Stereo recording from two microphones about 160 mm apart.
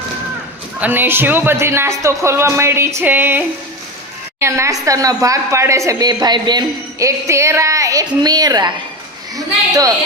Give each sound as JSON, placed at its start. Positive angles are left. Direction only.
{"t": 0.8, "sound": "speech", "side_deg": -10}